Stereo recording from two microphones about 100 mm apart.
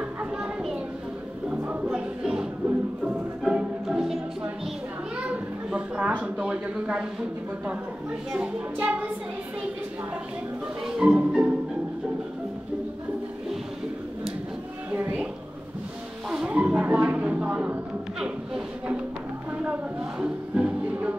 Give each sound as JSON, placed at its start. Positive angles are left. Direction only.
{"t": 0.2, "sound": "children playing", "side_deg": -5}
{"t": 1.5, "sound": "music", "side_deg": -15}
{"t": 5.1, "sound": "a sound", "side_deg": -10}
{"t": 8.3, "sound": "speech", "side_deg": -15}
{"t": 10.9, "sound": "music", "side_deg": -10}
{"t": 14.9, "sound": "music", "side_deg": -15}
{"t": 16.3, "sound": "a sound", "side_deg": -10}
{"t": 19.6, "sound": "music", "side_deg": -10}